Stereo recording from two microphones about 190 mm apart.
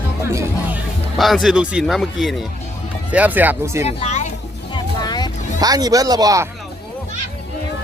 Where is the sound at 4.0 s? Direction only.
35° left (ahead or behind).